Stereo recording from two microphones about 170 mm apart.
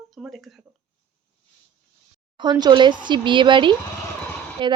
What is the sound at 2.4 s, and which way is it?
Speech, 25° right (ahead or behind).